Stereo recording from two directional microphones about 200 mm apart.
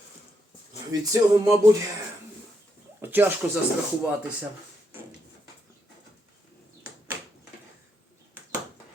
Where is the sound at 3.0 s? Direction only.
10° right (ahead or behind).